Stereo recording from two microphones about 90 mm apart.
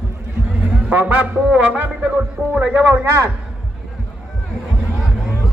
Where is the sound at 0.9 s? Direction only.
20° right (ahead or behind).